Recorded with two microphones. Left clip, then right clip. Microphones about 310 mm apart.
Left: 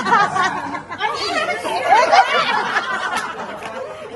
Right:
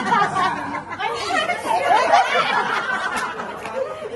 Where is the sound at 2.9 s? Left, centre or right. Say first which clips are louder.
Left 1 dB; centre.